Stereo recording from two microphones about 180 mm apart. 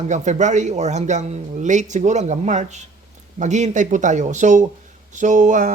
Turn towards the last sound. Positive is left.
turn(degrees=-45)  # may be behind; listen again after turning